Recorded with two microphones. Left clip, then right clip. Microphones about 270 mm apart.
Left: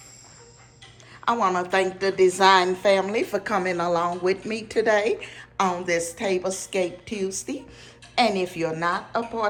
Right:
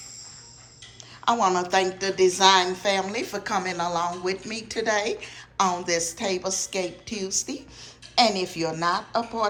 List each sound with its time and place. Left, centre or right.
1.2 s a woman's voice: centre